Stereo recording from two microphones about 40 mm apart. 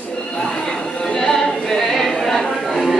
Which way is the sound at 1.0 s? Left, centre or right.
Centre.